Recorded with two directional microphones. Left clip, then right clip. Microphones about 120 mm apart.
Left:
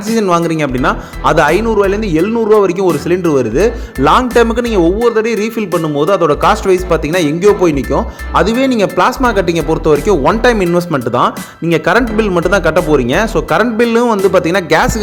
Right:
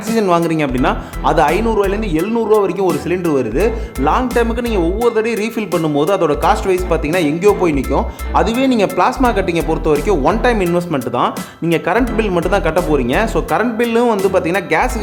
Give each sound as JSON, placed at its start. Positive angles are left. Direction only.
{"t": 0.1, "sound": "speech", "side_deg": 20}
{"t": 4.0, "sound": "a man's voice", "side_deg": 45}
{"t": 5.0, "sound": "speech", "side_deg": 20}
{"t": 6.4, "sound": "a man's voice", "side_deg": 30}